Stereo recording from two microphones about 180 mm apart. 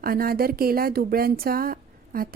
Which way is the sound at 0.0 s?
55° right (ahead or behind).